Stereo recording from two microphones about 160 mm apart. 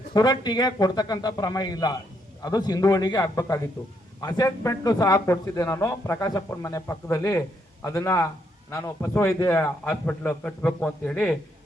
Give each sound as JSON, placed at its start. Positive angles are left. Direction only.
{"t": 0.1, "sound": "a man's voice", "side_deg": 25}